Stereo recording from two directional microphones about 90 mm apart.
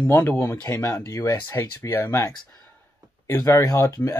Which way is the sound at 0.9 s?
40° left (ahead or behind).